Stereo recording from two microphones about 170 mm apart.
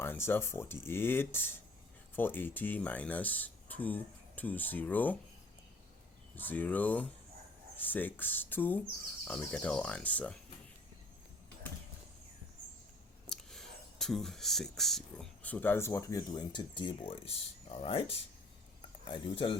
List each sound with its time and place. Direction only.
0.0 s speech: 15° left (ahead or behind)
6.3 s speech: 10° left (ahead or behind)
13.2 s speech: centre (ahead or behind); by 18.0 s 35° left (ahead or behind)
19.0 s speech: 30° left (ahead or behind)